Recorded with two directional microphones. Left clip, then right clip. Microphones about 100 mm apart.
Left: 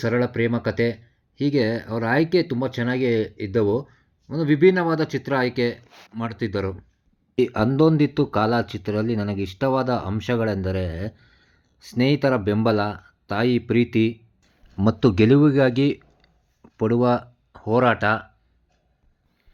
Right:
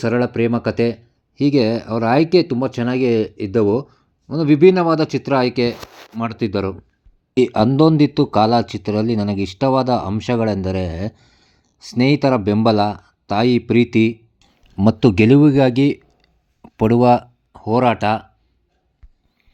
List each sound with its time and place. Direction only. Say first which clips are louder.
0.0 s speech: right 4 dB; 10° right (ahead or behind)
1.4 s speech: right 6 dB; 20° right (ahead or behind)
7.3 s speech: right 5 dB; 40° right (ahead or behind)
16.6 s a sound: right 6 dB; 55° right (ahead or behind)
17.0 s speech: right 8 dB; 40° right (ahead or behind)
17.5 s speech: right 3 dB; 25° right (ahead or behind)